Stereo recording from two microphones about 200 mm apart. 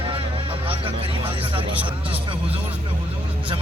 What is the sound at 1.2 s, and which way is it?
Speech, 25° right (ahead or behind).